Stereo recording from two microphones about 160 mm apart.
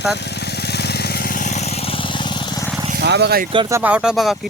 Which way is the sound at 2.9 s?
90° right.